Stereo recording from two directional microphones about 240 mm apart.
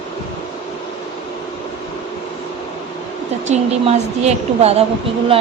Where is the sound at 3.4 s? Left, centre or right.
Right.